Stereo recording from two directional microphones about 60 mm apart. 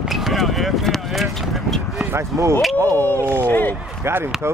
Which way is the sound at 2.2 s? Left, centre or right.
Right.